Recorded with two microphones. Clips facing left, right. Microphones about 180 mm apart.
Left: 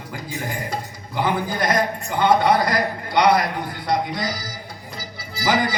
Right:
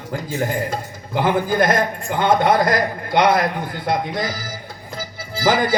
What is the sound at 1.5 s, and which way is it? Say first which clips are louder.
A man's voice: right 4 dB; 50° right (ahead or behind).